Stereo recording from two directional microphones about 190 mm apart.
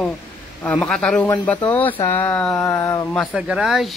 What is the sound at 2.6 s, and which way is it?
Speech, 15° left (ahead or behind).